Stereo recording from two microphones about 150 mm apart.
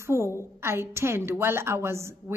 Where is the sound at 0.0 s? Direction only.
20° right (ahead or behind).